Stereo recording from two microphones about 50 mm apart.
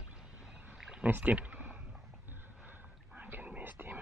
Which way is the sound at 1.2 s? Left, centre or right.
Right.